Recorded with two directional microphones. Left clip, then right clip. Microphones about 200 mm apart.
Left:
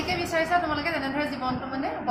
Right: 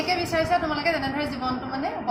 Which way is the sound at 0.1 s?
10° right (ahead or behind).